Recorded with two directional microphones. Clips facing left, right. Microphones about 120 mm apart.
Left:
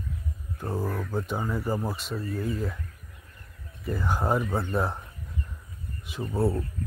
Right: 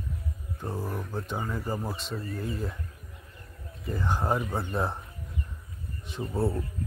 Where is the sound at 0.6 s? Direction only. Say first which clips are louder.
Left 4 dB; 15° left (ahead or behind).